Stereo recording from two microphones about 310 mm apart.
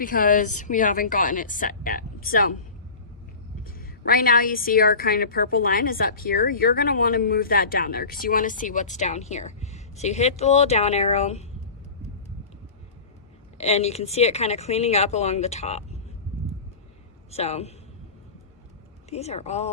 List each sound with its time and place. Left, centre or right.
0.0 s a woman's voice: left
3.6 s a woman's voice: left
13.6 s a woman's voice: left
17.3 s a woman's voice: left
19.1 s a woman's voice: left